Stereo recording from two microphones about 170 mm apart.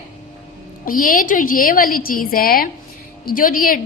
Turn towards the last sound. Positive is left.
turn(degrees=55)  # may be behind; listen again after turning